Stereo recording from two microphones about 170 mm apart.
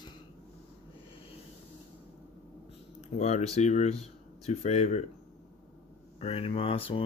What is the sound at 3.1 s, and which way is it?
Speech, 40° left (ahead or behind).